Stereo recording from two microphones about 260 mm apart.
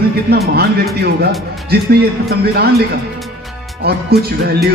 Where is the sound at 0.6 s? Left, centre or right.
Right.